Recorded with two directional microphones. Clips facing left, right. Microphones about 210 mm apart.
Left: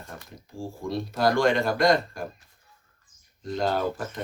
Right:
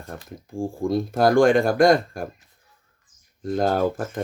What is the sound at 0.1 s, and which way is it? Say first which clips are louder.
Speech: right 9 dB; 55° right (ahead or behind).